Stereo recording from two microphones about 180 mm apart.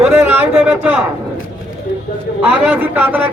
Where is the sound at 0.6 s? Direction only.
10° right (ahead or behind).